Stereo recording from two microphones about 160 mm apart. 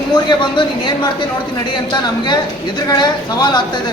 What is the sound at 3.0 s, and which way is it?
Speech, 30° left (ahead or behind).